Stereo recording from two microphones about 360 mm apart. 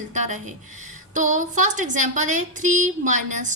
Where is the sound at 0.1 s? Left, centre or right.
Centre.